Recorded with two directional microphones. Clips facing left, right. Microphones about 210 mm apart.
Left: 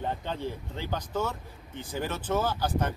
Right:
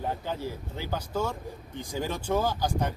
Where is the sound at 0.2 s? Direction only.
10° right (ahead or behind).